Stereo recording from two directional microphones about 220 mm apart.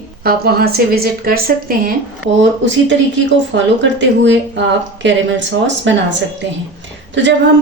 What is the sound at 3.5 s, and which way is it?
Speech, 55° right (ahead or behind).